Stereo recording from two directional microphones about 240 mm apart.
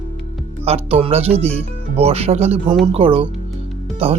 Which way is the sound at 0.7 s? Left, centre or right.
Right.